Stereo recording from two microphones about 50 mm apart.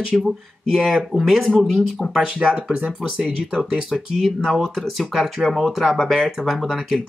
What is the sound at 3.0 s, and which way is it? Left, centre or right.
Speech, centre.